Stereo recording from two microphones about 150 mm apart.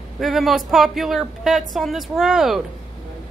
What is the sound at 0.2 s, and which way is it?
Speech, centre (ahead or behind).